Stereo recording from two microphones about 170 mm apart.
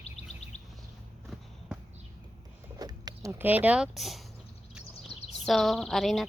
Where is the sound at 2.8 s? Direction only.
25° right (ahead or behind).